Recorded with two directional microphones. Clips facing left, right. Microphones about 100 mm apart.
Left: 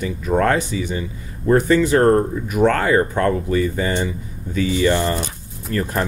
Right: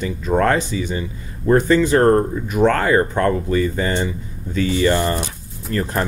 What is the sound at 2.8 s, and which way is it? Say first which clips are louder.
Speech: even; 45° right (ahead or behind).